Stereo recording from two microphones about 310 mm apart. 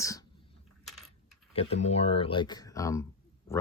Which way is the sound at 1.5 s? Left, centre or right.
Centre.